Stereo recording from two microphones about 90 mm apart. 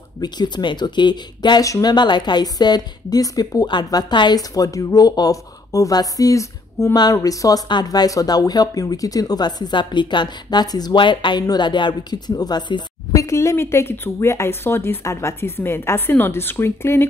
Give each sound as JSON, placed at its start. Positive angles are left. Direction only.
{"t": 0.2, "sound": "speech", "side_deg": 55}
{"t": 1.6, "sound": "speech", "side_deg": 45}
{"t": 4.4, "sound": "a woman's voice", "side_deg": 40}
{"t": 7.6, "sound": "speech", "side_deg": 50}
{"t": 13.1, "sound": "speech", "side_deg": 35}